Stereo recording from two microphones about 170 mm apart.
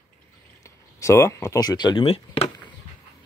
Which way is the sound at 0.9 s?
15° left (ahead or behind).